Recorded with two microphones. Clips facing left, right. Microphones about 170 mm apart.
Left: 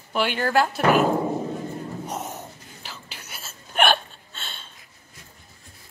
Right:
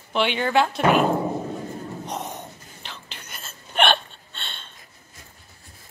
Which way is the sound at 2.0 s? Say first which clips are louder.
Even; 5° left (ahead or behind).